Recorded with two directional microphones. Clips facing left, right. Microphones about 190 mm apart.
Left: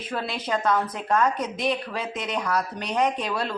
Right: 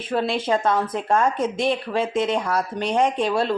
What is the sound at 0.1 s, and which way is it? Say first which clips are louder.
A woman's voice: right 7 dB; 25° right (ahead or behind).